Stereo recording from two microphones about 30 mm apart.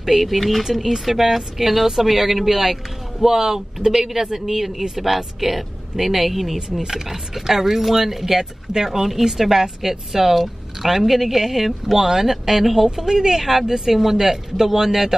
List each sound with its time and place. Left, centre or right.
0.0 s speech: centre
0.7 s speech: centre
3.3 s a man's voice: right